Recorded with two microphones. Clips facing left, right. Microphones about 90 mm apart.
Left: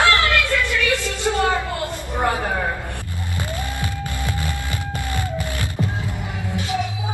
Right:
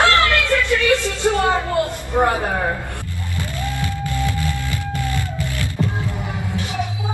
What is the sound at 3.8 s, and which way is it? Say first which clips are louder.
Music: right 4 dB; 20° left (ahead or behind).